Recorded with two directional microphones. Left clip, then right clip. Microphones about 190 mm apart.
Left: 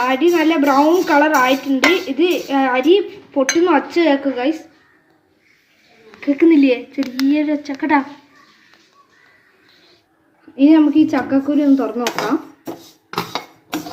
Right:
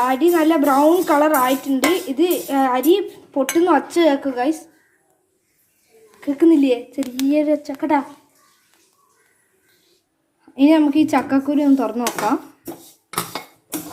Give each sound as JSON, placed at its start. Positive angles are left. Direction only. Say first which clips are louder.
{"t": 0.0, "sound": "speech", "louder": "left 1 dB", "side_deg": -35}
{"t": 6.3, "sound": "a woman's voice", "louder": "left 2 dB", "side_deg": -25}
{"t": 10.5, "sound": "speech", "louder": "left 3 dB", "side_deg": -45}